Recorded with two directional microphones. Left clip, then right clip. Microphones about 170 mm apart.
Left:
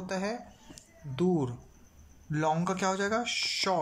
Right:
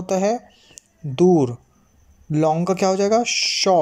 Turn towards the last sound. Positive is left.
turn(degrees=-35)  # may be behind; listen again after turning